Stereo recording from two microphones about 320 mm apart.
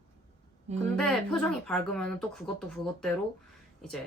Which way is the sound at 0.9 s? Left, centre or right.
Centre.